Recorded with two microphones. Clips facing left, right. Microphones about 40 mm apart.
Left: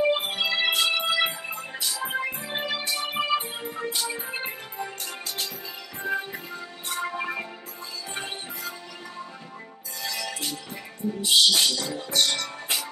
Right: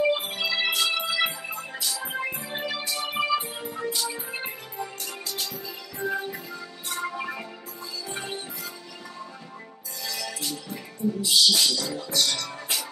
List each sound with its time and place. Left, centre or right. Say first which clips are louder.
0.1 s music: left 1 dB; left
8.1 s music: even; left
10.0 s music: left 1 dB; left